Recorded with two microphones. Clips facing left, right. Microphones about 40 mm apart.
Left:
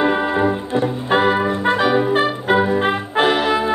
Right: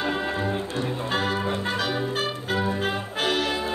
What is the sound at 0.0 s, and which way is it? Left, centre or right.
Music, left.